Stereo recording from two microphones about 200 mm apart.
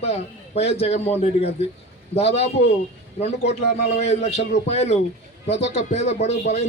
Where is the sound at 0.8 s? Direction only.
30° left (ahead or behind).